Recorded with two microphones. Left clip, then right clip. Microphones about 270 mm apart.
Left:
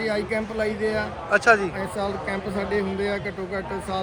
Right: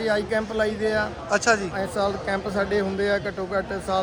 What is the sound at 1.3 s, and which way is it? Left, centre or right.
Speech, centre.